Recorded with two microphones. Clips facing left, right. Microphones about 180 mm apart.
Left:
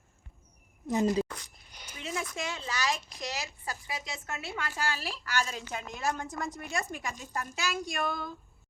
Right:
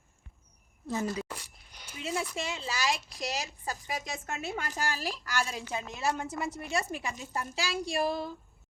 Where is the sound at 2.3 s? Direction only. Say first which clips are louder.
Right 1 dB; 30° right (ahead or behind).